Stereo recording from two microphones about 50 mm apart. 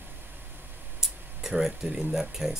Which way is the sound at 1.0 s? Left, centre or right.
Centre.